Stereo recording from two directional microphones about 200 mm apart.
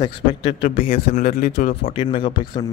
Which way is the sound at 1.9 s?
25° left (ahead or behind).